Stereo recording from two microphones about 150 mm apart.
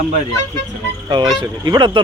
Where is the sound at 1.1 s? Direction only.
30° right (ahead or behind).